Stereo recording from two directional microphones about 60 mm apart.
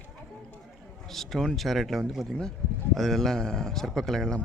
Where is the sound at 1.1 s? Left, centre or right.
Centre.